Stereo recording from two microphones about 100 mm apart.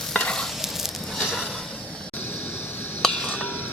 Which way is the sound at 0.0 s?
5° left (ahead or behind).